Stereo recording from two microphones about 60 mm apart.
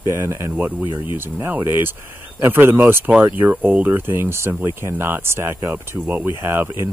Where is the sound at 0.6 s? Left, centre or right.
Right.